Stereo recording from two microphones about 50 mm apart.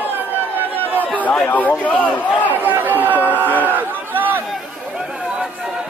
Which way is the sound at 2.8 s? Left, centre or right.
Right.